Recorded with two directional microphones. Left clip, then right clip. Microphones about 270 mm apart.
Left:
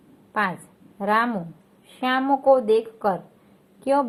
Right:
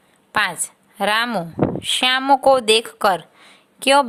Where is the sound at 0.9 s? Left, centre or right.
Right.